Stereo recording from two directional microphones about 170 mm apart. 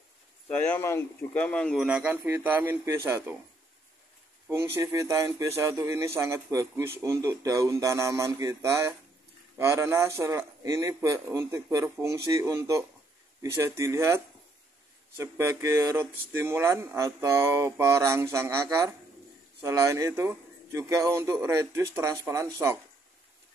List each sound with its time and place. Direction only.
0.5 s speech: 10° left (ahead or behind)
1.9 s speech: 10° right (ahead or behind)
4.7 s speech: 15° right (ahead or behind)